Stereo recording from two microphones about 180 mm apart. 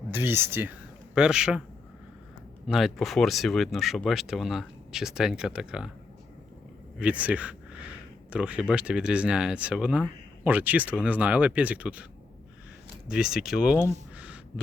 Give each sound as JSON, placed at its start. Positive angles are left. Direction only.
{"t": 0.1, "sound": "a man's voice", "side_deg": -10}
{"t": 2.6, "sound": "speech", "side_deg": 0}
{"t": 7.0, "sound": "speech", "side_deg": -5}
{"t": 13.1, "sound": "speech", "side_deg": -5}
{"t": 14.2, "sound": "a sound", "side_deg": -5}